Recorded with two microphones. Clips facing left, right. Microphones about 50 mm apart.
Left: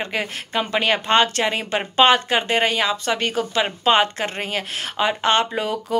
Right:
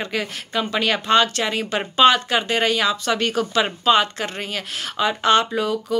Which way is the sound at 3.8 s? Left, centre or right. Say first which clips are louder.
Left 1 dB; left.